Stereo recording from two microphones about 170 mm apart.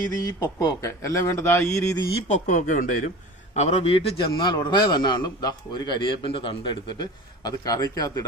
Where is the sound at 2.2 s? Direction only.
45° left (ahead or behind).